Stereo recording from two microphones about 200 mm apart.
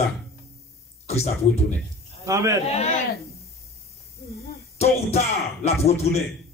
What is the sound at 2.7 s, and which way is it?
Speech, 35° left (ahead or behind).